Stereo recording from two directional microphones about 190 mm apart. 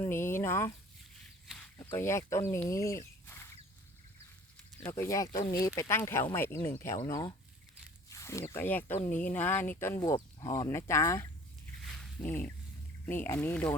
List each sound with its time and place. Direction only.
0.0 s speech: 10° left (ahead or behind)
1.8 s speech: 10° left (ahead or behind)
4.8 s speech: 15° left (ahead or behind)
11.9 s a sound: 5° left (ahead or behind)
13.1 s speech: 10° left (ahead or behind)